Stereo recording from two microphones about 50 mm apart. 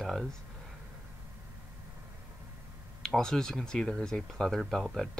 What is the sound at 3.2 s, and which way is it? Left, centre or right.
Speech, centre.